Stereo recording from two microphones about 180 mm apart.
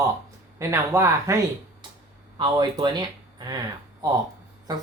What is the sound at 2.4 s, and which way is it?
Speech, 25° right (ahead or behind).